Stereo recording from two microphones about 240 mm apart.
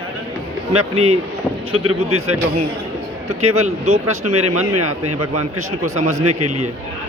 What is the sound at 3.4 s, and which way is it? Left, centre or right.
A man's voice, right.